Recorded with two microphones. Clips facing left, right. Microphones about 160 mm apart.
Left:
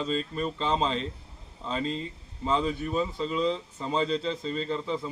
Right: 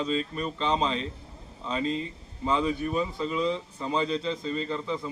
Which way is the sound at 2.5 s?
30° left (ahead or behind).